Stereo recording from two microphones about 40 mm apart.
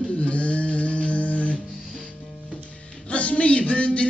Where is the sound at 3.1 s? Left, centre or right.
Left.